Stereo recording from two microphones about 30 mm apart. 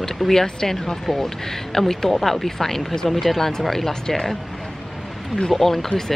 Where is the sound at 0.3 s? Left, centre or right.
Centre.